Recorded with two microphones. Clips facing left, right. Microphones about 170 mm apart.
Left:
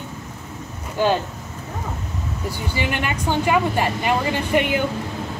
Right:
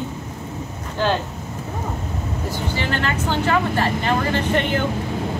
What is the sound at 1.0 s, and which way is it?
Speech, 10° left (ahead or behind).